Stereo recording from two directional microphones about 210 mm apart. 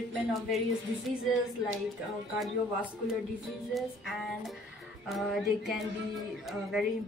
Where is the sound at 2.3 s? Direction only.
Centre (ahead or behind).